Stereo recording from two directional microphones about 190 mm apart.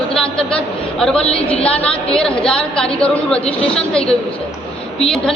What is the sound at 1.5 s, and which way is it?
Speech, 30° left (ahead or behind).